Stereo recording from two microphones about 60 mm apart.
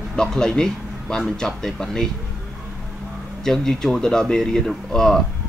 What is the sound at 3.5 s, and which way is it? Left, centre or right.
Speech, centre.